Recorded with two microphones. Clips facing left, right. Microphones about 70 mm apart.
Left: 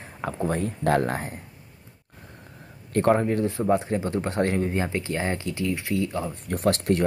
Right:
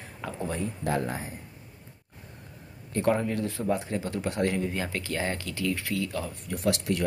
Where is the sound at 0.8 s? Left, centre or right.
Left.